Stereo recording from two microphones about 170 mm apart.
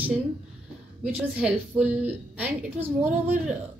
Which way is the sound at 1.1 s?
5° right (ahead or behind).